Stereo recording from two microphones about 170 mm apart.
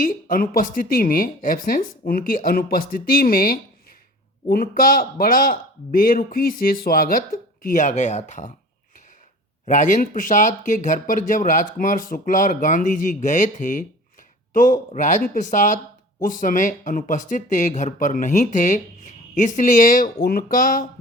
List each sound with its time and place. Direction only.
0.0 s a man's voice: 55° left (ahead or behind)
9.6 s speech: 50° left (ahead or behind)